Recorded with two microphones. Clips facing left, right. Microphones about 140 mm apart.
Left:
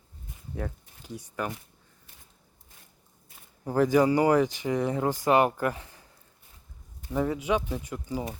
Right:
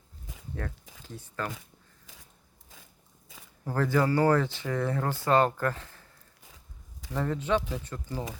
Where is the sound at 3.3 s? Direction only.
90° right.